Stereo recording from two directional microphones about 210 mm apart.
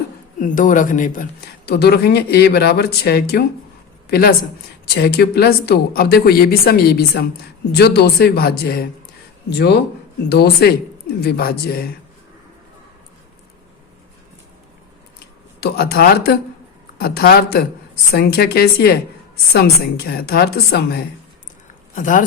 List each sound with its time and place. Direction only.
0.3 s speech: 40° left (ahead or behind)
10.2 s speech: 50° left (ahead or behind)
15.6 s speech: 50° left (ahead or behind)
21.9 s speech: 40° left (ahead or behind)